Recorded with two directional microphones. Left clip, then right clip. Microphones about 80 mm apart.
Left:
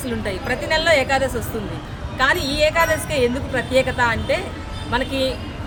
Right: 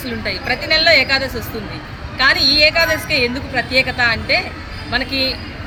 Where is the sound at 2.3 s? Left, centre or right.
Left.